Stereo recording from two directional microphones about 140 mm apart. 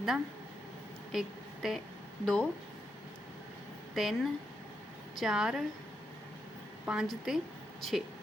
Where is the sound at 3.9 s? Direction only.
Centre (ahead or behind).